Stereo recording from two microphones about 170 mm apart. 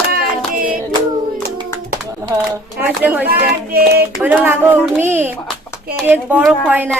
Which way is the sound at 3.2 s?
65° right (ahead or behind).